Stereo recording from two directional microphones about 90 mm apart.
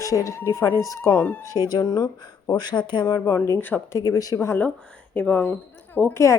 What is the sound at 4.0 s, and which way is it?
Speech, 40° left (ahead or behind).